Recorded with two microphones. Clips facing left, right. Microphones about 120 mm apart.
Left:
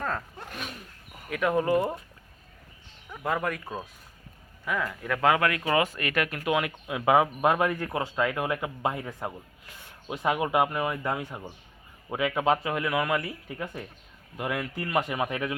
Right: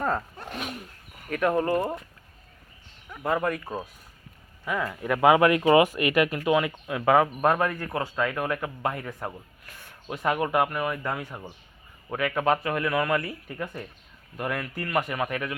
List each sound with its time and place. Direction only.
1.3 s speech: 5° left (ahead or behind)
1.6 s a man's voice: 15° left (ahead or behind)
3.2 s speech: 5° right (ahead or behind); by 9.1 s 20° left (ahead or behind)
9.6 s a sound: 20° left (ahead or behind)
10.2 s a man's voice: 10° left (ahead or behind)